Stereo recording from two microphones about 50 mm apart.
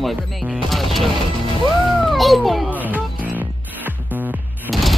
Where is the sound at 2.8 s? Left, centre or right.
Right.